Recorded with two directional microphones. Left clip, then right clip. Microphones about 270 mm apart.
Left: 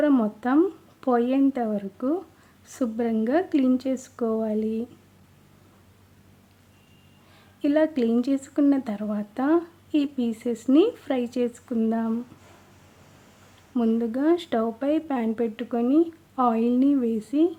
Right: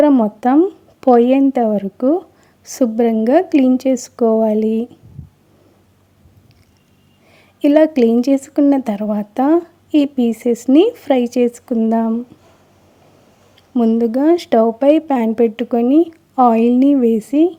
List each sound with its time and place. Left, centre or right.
0.0 s a woman's voice: centre
7.3 s a woman's voice: right
13.7 s a woman's voice: centre